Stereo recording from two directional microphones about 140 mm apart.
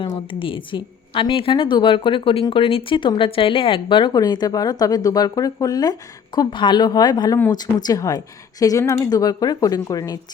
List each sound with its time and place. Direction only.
0.0 s a woman's voice: 40° left (ahead or behind)